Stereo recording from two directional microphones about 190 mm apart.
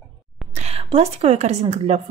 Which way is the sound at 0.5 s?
30° right (ahead or behind).